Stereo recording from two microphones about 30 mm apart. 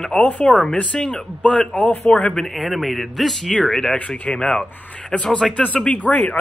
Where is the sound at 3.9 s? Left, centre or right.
Left.